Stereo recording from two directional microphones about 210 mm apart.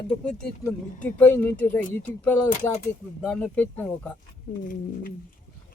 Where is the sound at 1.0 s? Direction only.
10° left (ahead or behind).